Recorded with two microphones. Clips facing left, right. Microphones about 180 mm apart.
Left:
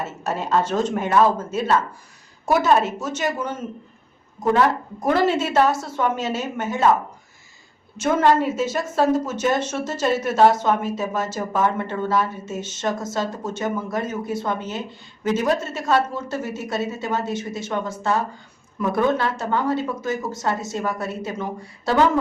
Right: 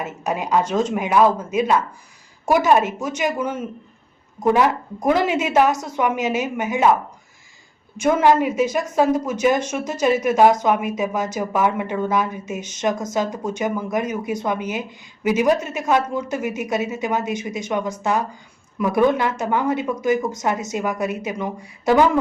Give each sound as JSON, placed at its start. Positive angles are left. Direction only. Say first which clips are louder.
{"t": 0.0, "sound": "a woman's voice", "louder": "right 2 dB", "side_deg": -15}
{"t": 8.0, "sound": "a woman's voice", "louder": "right 2 dB", "side_deg": -10}